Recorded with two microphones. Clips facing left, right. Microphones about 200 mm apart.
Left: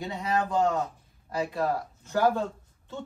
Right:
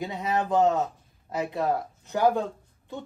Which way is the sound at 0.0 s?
20° right (ahead or behind).